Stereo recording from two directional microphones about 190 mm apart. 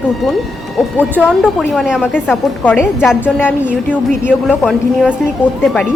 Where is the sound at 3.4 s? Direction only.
5° right (ahead or behind).